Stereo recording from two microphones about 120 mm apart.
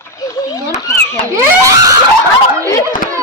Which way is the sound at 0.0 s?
30° left (ahead or behind).